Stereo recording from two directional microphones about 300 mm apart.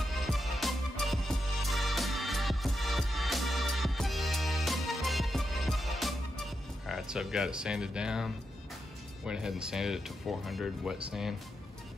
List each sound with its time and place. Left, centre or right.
0.0 s music: centre
9.2 s speech: centre